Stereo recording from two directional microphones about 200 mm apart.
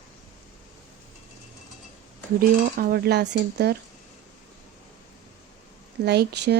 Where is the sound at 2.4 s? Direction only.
50° right (ahead or behind).